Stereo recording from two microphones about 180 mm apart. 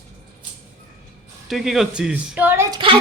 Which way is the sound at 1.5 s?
Centre (ahead or behind).